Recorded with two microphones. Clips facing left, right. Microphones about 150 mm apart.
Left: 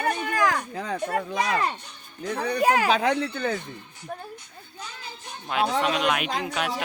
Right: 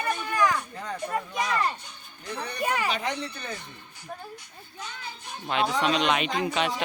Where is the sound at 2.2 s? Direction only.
90° left.